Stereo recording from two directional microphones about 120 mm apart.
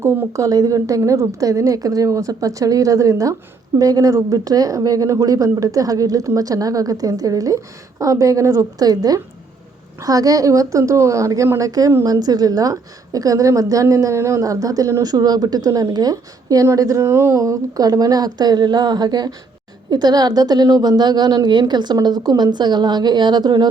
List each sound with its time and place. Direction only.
0.0 s a woman's voice: 20° right (ahead or behind); by 23.6 s 35° right (ahead or behind)